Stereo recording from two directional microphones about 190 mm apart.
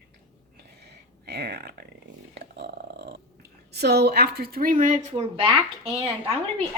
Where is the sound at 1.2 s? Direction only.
60° right (ahead or behind).